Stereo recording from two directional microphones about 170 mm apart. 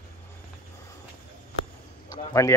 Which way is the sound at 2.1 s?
20° left (ahead or behind).